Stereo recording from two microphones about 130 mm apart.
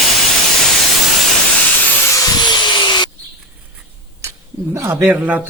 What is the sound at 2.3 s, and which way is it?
Tools, 35° left (ahead or behind).